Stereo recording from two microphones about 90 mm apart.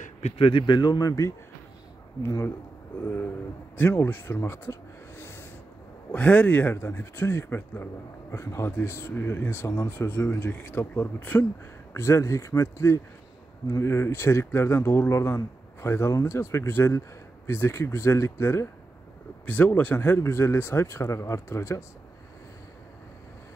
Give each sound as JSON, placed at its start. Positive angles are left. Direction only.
{"t": 0.4, "sound": "speech", "side_deg": 70}
{"t": 3.7, "sound": "speech", "side_deg": 25}
{"t": 6.1, "sound": "a man's voice", "side_deg": 15}
{"t": 19.4, "sound": "a man's voice", "side_deg": 20}